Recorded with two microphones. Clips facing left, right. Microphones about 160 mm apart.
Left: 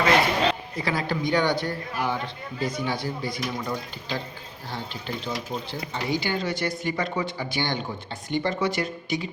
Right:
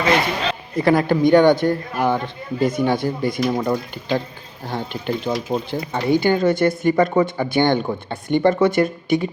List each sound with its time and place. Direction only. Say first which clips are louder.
0.8 s a man's voice: right 11 dB; 55° right (ahead or behind)